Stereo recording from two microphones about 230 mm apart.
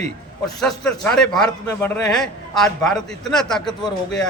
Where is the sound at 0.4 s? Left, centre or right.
Centre.